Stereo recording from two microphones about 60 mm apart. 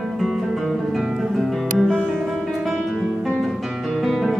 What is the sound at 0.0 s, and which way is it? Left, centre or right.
Music, centre.